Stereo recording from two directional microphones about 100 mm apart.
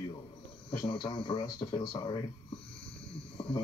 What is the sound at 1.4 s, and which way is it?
Speech, 45° left (ahead or behind).